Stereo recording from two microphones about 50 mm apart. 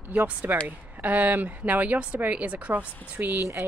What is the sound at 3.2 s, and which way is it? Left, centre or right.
Speech, right.